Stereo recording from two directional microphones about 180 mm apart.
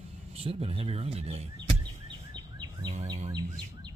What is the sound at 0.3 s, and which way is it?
Speech, 30° right (ahead or behind).